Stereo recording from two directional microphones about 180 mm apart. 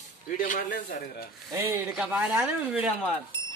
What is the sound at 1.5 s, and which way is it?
Speech, 15° right (ahead or behind).